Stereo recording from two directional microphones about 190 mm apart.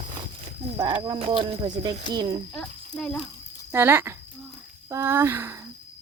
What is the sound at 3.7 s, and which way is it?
Speech, 10° right (ahead or behind).